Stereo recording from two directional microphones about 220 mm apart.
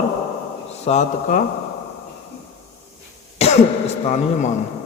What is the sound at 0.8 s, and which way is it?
Mantra, 30° left (ahead or behind).